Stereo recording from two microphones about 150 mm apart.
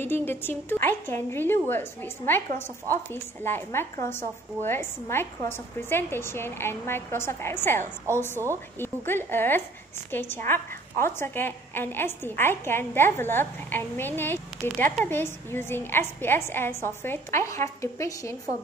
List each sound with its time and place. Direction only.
0.0 s a woman's voice: 15° left (ahead or behind)